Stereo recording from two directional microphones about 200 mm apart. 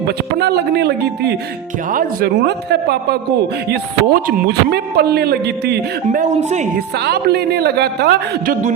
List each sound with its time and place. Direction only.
0.3 s speech: 55° right (ahead or behind)
6.1 s speech: 35° right (ahead or behind)
6.7 s speech: 55° right (ahead or behind)